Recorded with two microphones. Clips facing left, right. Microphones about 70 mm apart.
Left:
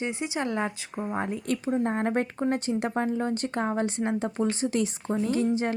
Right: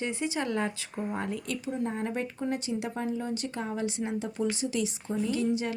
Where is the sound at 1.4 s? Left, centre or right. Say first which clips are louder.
Left 6 dB; left.